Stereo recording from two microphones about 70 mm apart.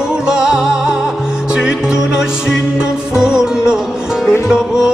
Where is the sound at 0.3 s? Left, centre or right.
Centre.